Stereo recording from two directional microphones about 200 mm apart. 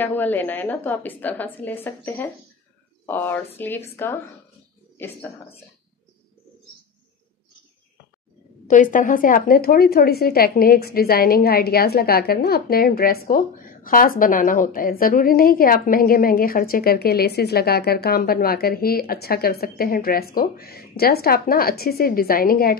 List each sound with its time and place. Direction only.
0.0 s a woman's voice: 10° left (ahead or behind)
8.6 s a woman's voice: 40° left (ahead or behind)